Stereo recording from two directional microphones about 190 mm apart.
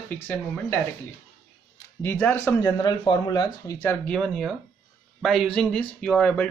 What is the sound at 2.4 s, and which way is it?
Speech, 20° left (ahead or behind).